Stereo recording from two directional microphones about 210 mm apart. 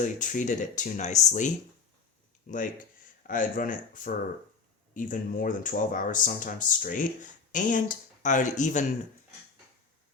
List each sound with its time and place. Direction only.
0.0 s speech: 35° left (ahead or behind)